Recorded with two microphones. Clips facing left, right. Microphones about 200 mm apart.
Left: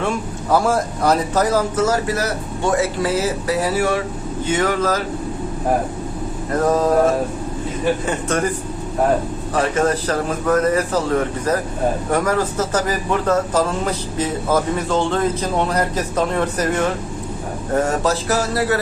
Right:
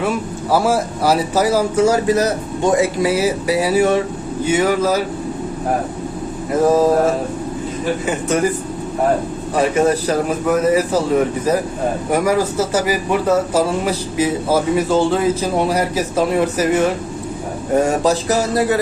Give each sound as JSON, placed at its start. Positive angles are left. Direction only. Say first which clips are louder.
{"t": 0.5, "sound": "speech", "louder": "right 1 dB", "side_deg": -5}
{"t": 6.5, "sound": "speech", "louder": "right 4 dB", "side_deg": -10}
{"t": 8.0, "sound": "speech", "louder": "right 3 dB", "side_deg": -10}
{"t": 9.6, "sound": "speech", "louder": "right 3 dB", "side_deg": -10}